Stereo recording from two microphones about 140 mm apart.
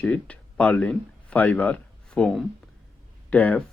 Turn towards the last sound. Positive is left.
turn(degrees=10)  # may be behind; listen again after turning